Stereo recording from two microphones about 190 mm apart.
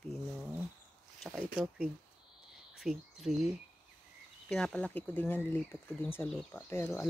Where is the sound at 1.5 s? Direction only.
5° right (ahead or behind).